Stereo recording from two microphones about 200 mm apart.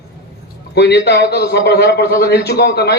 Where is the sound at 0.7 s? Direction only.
55° left (ahead or behind).